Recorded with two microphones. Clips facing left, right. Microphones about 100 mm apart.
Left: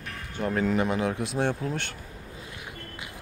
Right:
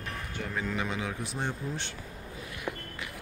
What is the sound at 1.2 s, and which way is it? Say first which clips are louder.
Speech: left 7 dB; 85° left.